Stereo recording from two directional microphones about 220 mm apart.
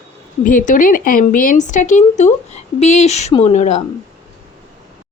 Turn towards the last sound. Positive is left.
turn(degrees=30)  # may be behind; listen again after turning